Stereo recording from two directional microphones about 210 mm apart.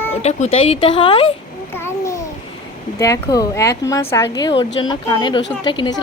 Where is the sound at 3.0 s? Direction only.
15° left (ahead or behind).